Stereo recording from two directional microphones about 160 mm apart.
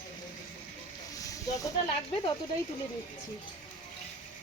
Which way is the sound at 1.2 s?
20° left (ahead or behind).